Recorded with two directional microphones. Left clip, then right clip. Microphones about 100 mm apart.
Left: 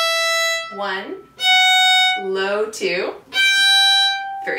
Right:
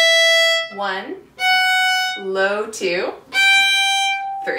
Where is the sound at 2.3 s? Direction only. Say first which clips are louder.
Right 1 dB; 15° right (ahead or behind).